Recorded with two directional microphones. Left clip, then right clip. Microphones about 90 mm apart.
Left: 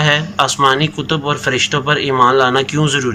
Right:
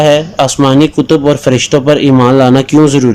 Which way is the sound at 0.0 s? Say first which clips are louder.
Right 6 dB; 35° right (ahead or behind).